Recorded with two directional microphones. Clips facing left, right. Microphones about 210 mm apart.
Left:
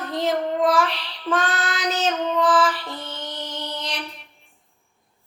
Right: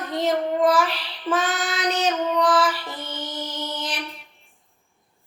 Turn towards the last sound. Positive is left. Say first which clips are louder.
# right 1 dB
turn(degrees=0)  # may be behind; listen again after turning